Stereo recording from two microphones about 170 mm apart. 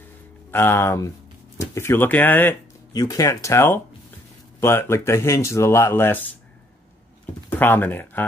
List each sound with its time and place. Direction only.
0.5 s speech: 15° left (ahead or behind)
7.4 s speech: 10° left (ahead or behind)